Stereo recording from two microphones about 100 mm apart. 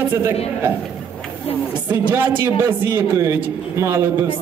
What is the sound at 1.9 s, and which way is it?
A man's voice, 20° right (ahead or behind).